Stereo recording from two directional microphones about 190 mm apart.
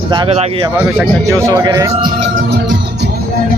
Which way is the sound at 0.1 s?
30° right (ahead or behind).